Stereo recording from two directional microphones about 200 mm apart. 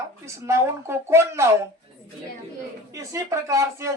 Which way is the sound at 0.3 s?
15° right (ahead or behind).